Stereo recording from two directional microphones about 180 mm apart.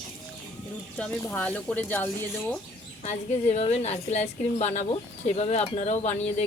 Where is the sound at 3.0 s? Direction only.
40° left (ahead or behind).